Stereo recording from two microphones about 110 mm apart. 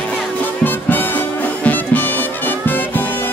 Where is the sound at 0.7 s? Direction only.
15° left (ahead or behind).